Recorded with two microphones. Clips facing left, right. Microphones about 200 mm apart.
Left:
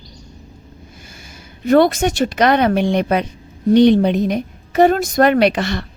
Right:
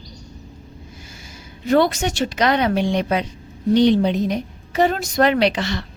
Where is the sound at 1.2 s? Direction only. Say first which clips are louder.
Left 4 dB; 55° left (ahead or behind).